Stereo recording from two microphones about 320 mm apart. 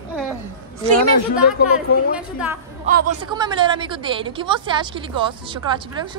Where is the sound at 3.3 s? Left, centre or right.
Centre.